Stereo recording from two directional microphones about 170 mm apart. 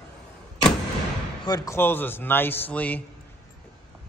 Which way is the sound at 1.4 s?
20° left (ahead or behind).